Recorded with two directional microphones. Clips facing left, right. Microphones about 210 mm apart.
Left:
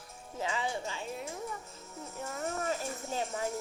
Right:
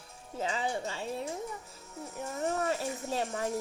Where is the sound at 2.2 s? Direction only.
15° right (ahead or behind).